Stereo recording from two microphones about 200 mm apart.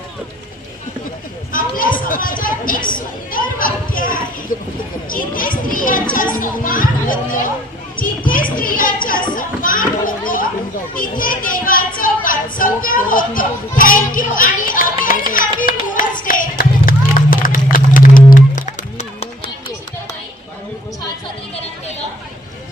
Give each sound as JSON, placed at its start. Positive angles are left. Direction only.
{"t": 1.5, "sound": "a child's voice", "side_deg": 45}
{"t": 15.6, "sound": "clapping", "side_deg": 45}